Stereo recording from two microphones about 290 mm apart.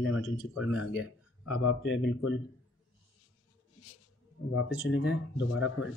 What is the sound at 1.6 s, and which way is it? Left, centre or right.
Speech, left.